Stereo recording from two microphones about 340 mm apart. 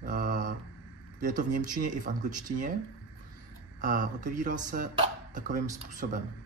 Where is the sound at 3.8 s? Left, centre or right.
Right.